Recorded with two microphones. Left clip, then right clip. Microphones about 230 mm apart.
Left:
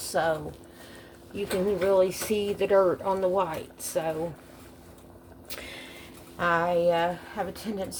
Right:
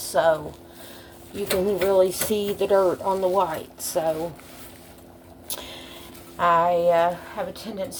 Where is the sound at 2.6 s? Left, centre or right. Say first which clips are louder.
Right 2 dB; centre.